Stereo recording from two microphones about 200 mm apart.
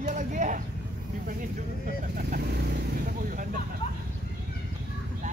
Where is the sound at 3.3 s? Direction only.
40° right (ahead or behind).